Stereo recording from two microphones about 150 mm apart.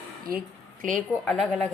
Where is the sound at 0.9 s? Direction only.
5° left (ahead or behind).